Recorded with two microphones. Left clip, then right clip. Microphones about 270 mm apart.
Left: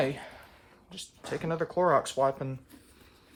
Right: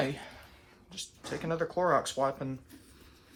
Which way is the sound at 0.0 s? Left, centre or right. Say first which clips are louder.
Left 3 dB; left.